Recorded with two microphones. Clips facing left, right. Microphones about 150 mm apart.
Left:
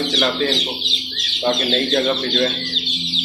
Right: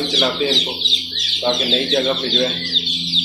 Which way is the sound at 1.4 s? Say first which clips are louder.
Even; centre (ahead or behind).